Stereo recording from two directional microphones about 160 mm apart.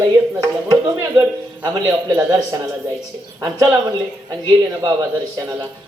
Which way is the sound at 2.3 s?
25° right (ahead or behind).